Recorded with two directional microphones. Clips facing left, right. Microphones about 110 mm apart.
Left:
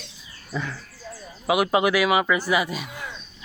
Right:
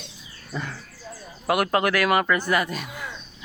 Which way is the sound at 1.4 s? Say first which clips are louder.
Left 1 dB; 5° left (ahead or behind).